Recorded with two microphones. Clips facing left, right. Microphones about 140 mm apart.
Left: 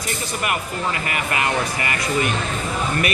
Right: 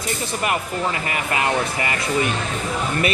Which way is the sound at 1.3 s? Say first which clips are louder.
Right 2 dB; 25° right (ahead or behind).